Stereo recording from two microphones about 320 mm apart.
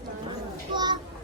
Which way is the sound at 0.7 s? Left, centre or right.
Centre.